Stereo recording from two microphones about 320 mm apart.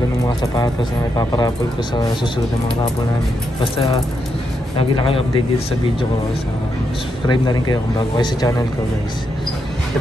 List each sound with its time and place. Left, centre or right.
1.1 s speech: centre
4.7 s speech: centre
7.2 s speech: centre